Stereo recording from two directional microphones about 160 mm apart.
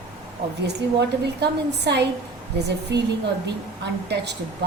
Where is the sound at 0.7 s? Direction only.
90° right.